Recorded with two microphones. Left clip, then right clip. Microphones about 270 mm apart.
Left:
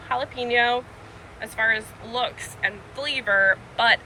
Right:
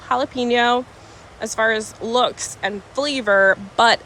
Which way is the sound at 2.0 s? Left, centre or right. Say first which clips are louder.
Right 9 dB; centre.